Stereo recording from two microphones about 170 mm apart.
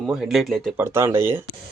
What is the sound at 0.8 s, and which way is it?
Speech, 15° right (ahead or behind).